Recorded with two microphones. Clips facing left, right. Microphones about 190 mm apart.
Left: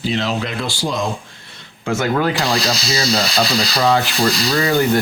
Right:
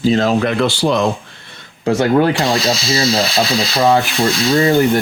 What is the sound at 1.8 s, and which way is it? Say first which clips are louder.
Speech: right 5 dB; 35° right (ahead or behind).